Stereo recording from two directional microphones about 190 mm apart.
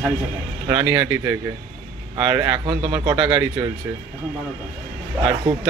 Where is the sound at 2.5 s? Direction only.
25° right (ahead or behind).